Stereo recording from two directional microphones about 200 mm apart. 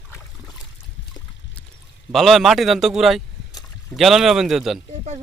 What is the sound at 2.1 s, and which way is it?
Speech, centre (ahead or behind).